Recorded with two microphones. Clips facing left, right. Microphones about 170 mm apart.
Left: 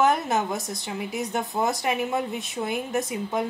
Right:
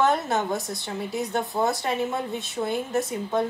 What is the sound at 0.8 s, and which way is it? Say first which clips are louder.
A woman's voice: even; 15° left (ahead or behind).